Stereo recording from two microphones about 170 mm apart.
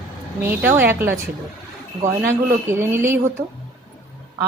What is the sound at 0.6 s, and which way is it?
Speech, 10° right (ahead or behind).